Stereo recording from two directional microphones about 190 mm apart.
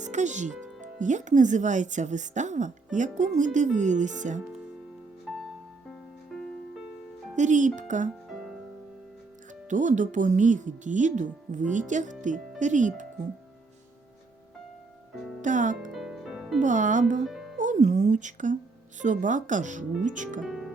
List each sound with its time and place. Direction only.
0.0 s speech: 40° right (ahead or behind)
5.9 s music: 5° left (ahead or behind)
7.3 s speech: 40° right (ahead or behind)
9.6 s speech: 40° right (ahead or behind)
15.4 s speech: 40° right (ahead or behind)
15.9 s music: centre (ahead or behind)
16.6 s speech: 40° right (ahead or behind)
17.2 s music: centre (ahead or behind)
17.6 s a woman's voice: 40° right (ahead or behind)
20.4 s speech: centre (ahead or behind)